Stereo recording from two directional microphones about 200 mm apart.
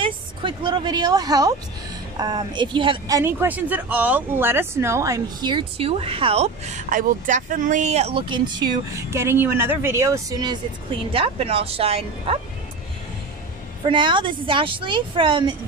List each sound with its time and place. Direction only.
0.0 s a woman's voice: 25° right (ahead or behind)
3.2 s speech: 10° right (ahead or behind); by 12.4 s 30° right (ahead or behind)
13.8 s speech: 25° right (ahead or behind)